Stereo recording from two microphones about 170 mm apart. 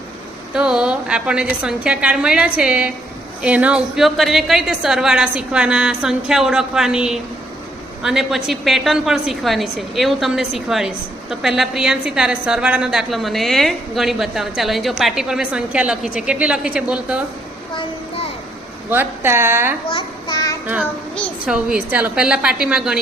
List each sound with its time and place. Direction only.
0.5 s a woman's voice: 5° right (ahead or behind)
18.9 s a woman's voice: 10° right (ahead or behind)
19.9 s a sound: 25° left (ahead or behind)
21.4 s a woman's voice: 5° right (ahead or behind)